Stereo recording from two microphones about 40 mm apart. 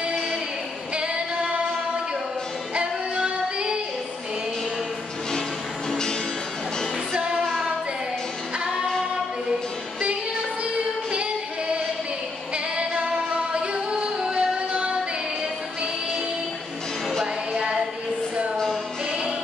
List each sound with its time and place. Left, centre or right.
0.9 s female singing: right
2.7 s music: right
5.9 s music: centre
14.2 s music: right
17.6 s music: right